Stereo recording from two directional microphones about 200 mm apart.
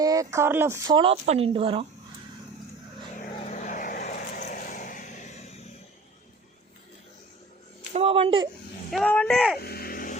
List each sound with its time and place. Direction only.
0.0 s speech: 15° right (ahead or behind)
0.9 s speech: 25° right (ahead or behind)
3.2 s vehicle: 35° left (ahead or behind)
7.9 s speech: 30° right (ahead or behind)
8.9 s speech: 5° left (ahead or behind)
9.6 s music: 50° left (ahead or behind)